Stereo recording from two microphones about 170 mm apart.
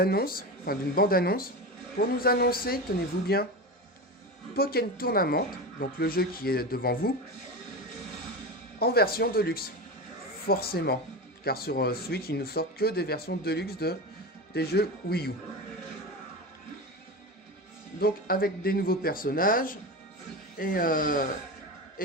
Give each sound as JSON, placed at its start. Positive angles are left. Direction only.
{"t": 0.0, "sound": "speech", "side_deg": 65}
{"t": 4.5, "sound": "speech", "side_deg": 65}
{"t": 8.8, "sound": "speech", "side_deg": 65}
{"t": 18.0, "sound": "speech", "side_deg": 60}